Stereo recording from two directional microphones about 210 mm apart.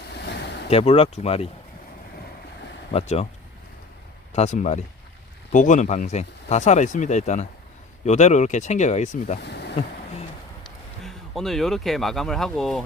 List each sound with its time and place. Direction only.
0.1 s vehicle: 50° left (ahead or behind)
0.7 s speech: 30° left (ahead or behind)
2.9 s speech: 30° left (ahead or behind)
4.3 s speech: 35° left (ahead or behind)
9.5 s a sound: 50° left (ahead or behind)
11.0 s speech: centre (ahead or behind)